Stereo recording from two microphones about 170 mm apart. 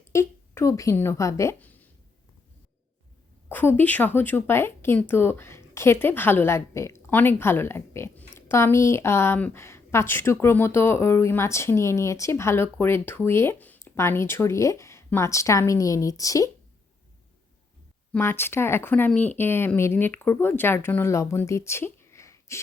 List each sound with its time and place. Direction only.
0.1 s a woman's voice: 15° left (ahead or behind)
3.5 s speech: 10° left (ahead or behind)
18.1 s speech: 15° left (ahead or behind)